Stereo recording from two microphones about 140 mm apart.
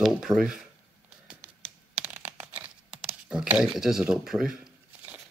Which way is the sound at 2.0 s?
10° right (ahead or behind).